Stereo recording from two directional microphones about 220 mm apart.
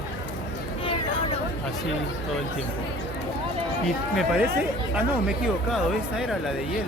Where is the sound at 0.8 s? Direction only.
25° left (ahead or behind).